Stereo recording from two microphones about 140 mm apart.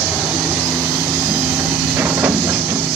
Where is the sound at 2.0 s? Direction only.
15° right (ahead or behind).